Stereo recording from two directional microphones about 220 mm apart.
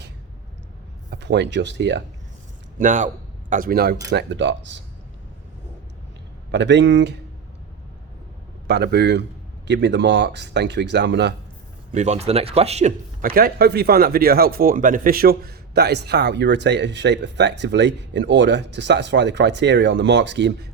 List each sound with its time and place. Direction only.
1.1 s speech: 50° right (ahead or behind)
2.7 s speech: 35° right (ahead or behind); by 4.8 s 55° right (ahead or behind)
6.5 s speech: 50° right (ahead or behind)
8.6 s speech: 50° right (ahead or behind)
11.9 s speech: 30° right (ahead or behind)
13.2 s speech: 45° right (ahead or behind)